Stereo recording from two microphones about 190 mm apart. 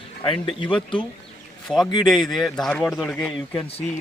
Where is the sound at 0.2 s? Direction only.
25° left (ahead or behind).